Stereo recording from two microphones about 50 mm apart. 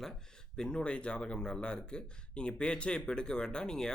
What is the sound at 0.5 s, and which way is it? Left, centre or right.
Speech, centre.